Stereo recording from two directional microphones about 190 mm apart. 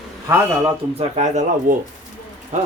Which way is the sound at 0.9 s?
35° right (ahead or behind).